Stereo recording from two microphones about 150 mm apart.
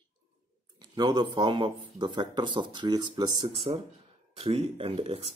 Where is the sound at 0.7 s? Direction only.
30° right (ahead or behind).